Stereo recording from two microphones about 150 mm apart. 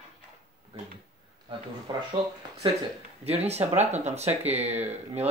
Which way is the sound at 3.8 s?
50° right (ahead or behind).